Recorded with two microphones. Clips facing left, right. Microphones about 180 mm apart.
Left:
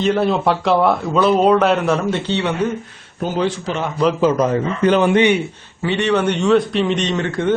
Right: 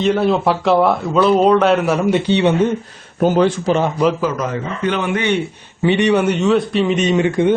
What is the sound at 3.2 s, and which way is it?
Speech, 55° right (ahead or behind).